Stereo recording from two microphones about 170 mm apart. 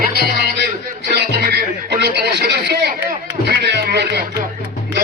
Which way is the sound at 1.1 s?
70° right (ahead or behind).